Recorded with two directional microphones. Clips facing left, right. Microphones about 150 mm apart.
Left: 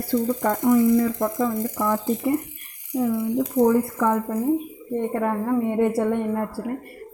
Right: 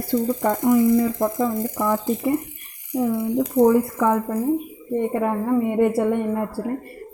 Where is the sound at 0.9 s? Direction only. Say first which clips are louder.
Right 1 dB; 25° right (ahead or behind).